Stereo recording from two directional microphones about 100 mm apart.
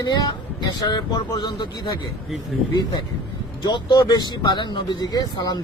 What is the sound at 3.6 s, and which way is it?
A man's voice, 45° left (ahead or behind).